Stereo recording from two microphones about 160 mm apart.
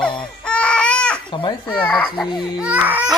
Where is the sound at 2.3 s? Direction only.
5° right (ahead or behind).